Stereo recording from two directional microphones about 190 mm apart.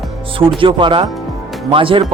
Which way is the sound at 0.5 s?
25° right (ahead or behind).